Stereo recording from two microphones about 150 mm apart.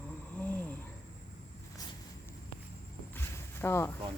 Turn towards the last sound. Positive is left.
turn(degrees=15)  # may be behind; listen again after turning